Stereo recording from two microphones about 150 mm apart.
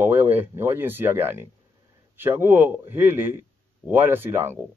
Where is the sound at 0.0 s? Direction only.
15° right (ahead or behind).